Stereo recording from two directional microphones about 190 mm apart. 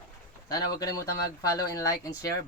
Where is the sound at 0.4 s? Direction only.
20° left (ahead or behind).